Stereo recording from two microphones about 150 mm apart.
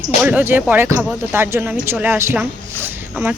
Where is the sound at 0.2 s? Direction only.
10° right (ahead or behind).